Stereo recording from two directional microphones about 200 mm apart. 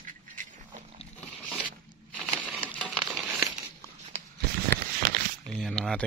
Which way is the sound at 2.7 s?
5° left (ahead or behind).